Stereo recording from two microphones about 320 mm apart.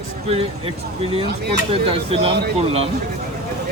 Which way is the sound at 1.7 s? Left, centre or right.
Centre.